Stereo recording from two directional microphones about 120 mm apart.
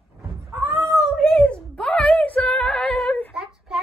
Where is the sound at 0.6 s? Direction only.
25° right (ahead or behind).